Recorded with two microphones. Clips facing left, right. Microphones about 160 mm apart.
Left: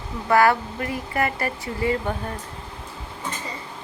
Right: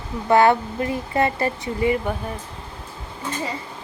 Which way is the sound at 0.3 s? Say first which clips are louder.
Right 2 dB; 25° right (ahead or behind).